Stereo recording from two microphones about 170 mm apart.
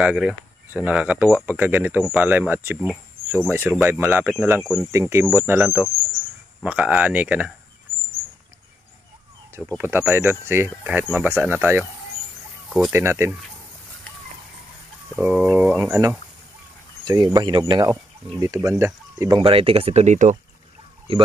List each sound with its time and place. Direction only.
0.0 s speech: 5° right (ahead or behind)
4.7 s speech: 15° right (ahead or behind)
9.8 s speech: 10° right (ahead or behind)
12.9 s speech: 15° right (ahead or behind)
15.1 s speech: 5° right (ahead or behind)
19.4 s speech: 35° right (ahead or behind)